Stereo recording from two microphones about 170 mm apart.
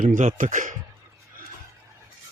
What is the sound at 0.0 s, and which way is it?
Speech, 50° right (ahead or behind).